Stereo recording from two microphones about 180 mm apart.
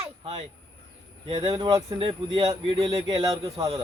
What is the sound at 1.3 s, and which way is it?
Speech, 25° right (ahead or behind).